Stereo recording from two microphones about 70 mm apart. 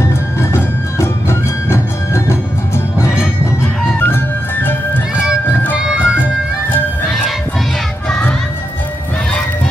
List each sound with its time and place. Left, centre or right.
0.0 s music: left
4.0 s music: left
5.8 s music: centre
8.1 s music: centre